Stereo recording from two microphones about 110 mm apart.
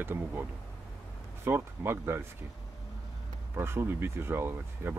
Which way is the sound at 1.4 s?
20° right (ahead or behind).